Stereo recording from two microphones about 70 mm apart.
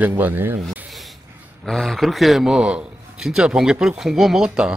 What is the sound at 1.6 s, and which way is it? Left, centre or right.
A man's voice, centre.